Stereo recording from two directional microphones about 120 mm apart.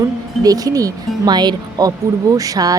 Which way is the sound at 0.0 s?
30° right (ahead or behind).